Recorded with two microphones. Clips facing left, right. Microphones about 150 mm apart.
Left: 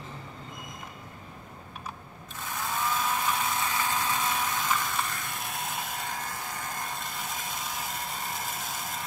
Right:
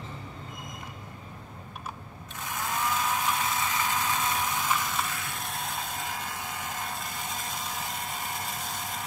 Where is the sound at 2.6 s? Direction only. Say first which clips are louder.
Even; 5° right (ahead or behind).